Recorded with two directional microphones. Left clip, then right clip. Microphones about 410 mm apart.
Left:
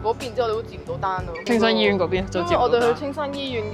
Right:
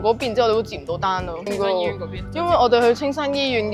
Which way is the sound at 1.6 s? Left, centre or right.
Left.